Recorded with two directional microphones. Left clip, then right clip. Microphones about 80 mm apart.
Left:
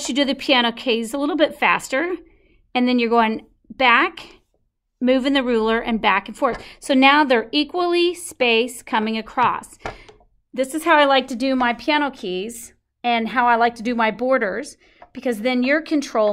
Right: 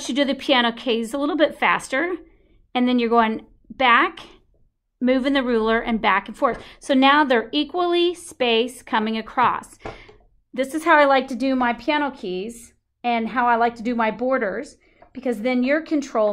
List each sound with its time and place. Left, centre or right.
0.0 s a woman's voice: left